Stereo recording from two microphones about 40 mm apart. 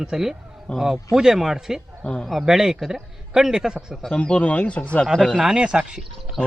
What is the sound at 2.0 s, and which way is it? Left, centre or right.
Speech, left.